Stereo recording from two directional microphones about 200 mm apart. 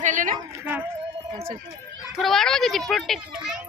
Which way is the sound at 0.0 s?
40° right (ahead or behind).